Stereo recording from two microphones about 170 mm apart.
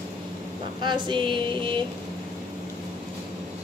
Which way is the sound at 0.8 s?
25° right (ahead or behind).